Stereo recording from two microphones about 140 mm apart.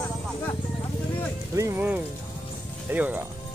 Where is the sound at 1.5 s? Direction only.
20° right (ahead or behind).